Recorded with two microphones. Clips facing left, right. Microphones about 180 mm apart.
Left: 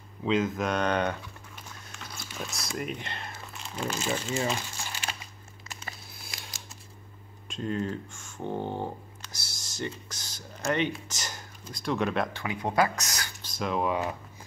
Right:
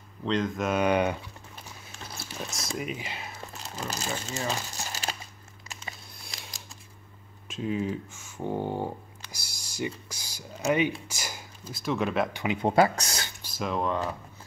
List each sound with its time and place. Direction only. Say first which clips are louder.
0.2 s speech: left 1 dB; 5° left (ahead or behind)
2.3 s speech: even; centre (ahead or behind)
3.9 s speech: left 4 dB; 40° right (ahead or behind)
6.1 s a sound: even; centre (ahead or behind)
7.4 s speech: right 1 dB; 5° right (ahead or behind)
12.3 s speech: right 5 dB; 15° right (ahead or behind)
12.6 s speech: right 4 dB; 30° right (ahead or behind)
13.4 s speech: left 1 dB; 5° right (ahead or behind)